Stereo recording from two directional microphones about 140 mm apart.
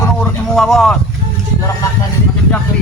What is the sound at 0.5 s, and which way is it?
Speech, 5° left (ahead or behind).